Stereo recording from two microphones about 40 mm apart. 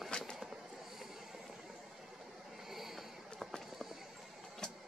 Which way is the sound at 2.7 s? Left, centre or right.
Centre.